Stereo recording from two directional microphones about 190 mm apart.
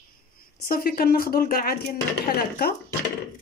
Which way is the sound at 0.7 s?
50° left (ahead or behind).